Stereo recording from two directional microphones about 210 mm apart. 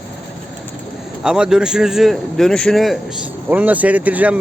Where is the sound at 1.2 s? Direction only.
5° right (ahead or behind).